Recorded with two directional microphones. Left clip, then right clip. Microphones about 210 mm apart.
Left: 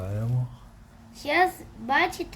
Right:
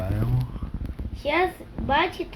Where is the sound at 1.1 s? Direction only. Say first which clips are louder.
Left 1 dB; 30° left (ahead or behind).